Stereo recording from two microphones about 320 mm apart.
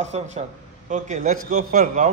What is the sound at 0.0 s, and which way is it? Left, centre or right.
Speech, right.